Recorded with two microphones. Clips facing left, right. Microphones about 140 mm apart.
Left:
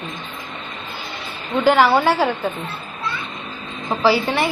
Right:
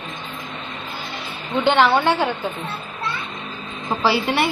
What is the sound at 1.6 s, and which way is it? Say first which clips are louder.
Speech: left 2 dB; 5° left (ahead or behind).